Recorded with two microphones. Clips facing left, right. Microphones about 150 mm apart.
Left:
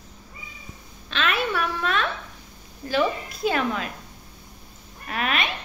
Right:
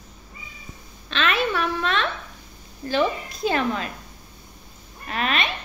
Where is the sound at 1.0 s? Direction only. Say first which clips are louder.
Right 2 dB; 5° left (ahead or behind).